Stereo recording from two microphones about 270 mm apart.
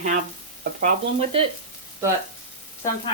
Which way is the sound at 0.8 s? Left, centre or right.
Right.